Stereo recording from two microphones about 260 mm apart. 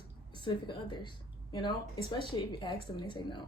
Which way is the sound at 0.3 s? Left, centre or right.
Centre.